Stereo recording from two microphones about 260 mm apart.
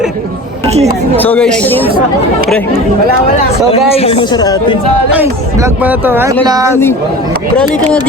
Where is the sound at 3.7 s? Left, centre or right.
Left.